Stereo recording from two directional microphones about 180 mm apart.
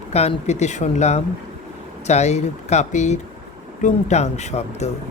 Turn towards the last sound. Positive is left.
turn(degrees=35)  # may be behind; listen again after turning